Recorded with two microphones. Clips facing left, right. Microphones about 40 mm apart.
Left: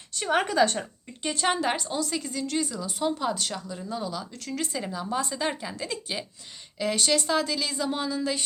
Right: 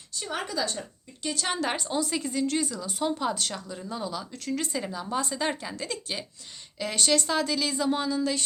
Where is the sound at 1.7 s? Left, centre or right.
Centre.